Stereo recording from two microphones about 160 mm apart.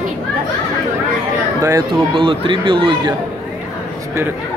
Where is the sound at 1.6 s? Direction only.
20° right (ahead or behind).